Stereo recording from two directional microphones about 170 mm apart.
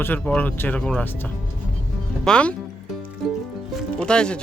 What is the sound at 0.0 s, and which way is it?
Speech, 10° left (ahead or behind).